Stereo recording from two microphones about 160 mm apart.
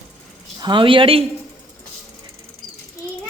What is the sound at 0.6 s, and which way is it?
Speech, 30° right (ahead or behind).